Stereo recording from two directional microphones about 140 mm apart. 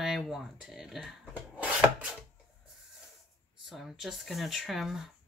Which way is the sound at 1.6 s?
10° right (ahead or behind).